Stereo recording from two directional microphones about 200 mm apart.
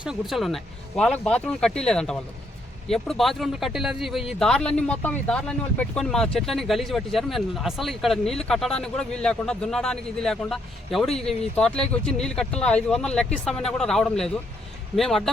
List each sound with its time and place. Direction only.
0.0 s speech: centre (ahead or behind)